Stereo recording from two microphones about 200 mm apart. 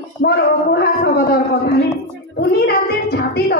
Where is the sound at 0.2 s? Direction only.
55° left (ahead or behind).